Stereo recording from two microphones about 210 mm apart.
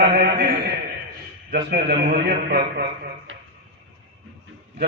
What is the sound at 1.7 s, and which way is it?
A man's voice, 50° right (ahead or behind).